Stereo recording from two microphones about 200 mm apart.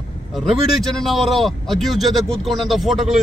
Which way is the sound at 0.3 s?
Centre (ahead or behind).